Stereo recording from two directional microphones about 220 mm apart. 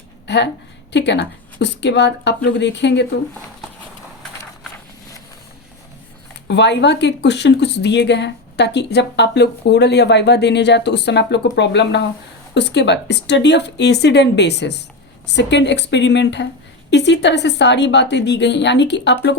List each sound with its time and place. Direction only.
0.9 s speech: 50° left (ahead or behind)
6.5 s speech: 50° left (ahead or behind)